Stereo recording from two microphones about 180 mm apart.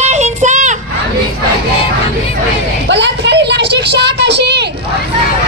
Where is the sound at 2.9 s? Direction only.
75° right (ahead or behind).